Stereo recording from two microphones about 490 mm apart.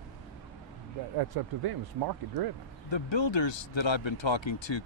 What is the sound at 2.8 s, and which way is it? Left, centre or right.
Speech, left.